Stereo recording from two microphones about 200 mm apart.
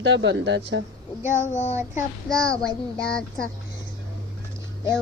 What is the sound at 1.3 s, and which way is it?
Child singing, 35° left (ahead or behind).